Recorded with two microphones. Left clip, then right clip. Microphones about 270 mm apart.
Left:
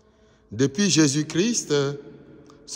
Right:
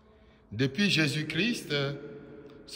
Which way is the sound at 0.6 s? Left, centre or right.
Centre.